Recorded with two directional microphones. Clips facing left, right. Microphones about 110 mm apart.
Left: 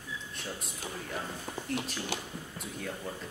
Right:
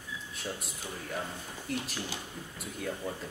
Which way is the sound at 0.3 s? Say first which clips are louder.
Right 4 dB; centre (ahead or behind).